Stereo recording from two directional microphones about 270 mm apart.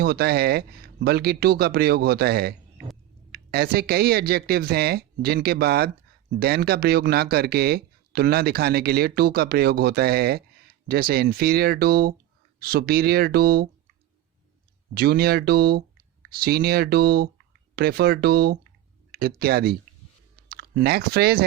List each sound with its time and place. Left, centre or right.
0.0 s speech: right
14.9 s speech: right